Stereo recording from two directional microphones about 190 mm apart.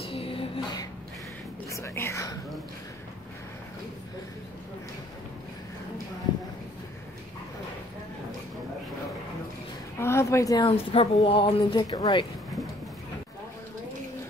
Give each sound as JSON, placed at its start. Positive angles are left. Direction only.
{"t": 0.0, "sound": "a sound", "side_deg": 30}
{"t": 1.7, "sound": "whispering", "side_deg": 15}
{"t": 9.9, "sound": "speech", "side_deg": 15}